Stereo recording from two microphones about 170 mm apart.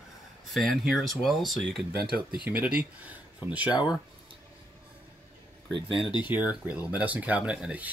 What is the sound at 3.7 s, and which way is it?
Speech, 25° left (ahead or behind).